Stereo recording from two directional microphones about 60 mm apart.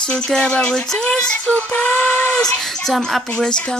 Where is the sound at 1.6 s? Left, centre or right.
Left.